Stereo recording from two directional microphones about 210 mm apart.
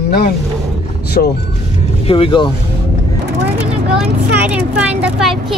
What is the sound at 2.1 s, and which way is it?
Speech, 25° left (ahead or behind).